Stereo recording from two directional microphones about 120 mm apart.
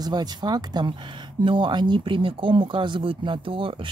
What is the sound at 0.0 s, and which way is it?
Speech, 35° right (ahead or behind).